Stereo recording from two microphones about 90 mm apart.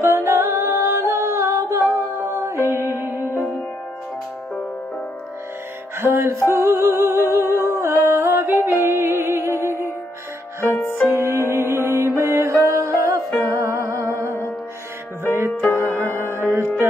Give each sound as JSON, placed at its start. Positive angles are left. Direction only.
{"t": 0.0, "sound": "a capella", "side_deg": -30}
{"t": 2.6, "sound": "music", "side_deg": -30}
{"t": 5.9, "sound": "music", "side_deg": -25}
{"t": 7.2, "sound": "humming", "side_deg": -30}
{"t": 7.6, "sound": "a sound", "side_deg": -30}
{"t": 8.8, "sound": "music", "side_deg": -30}
{"t": 11.1, "sound": "music", "side_deg": -30}
{"t": 15.3, "sound": "music", "side_deg": -30}
{"t": 15.7, "sound": "music", "side_deg": 30}
{"t": 16.3, "sound": "music", "side_deg": -25}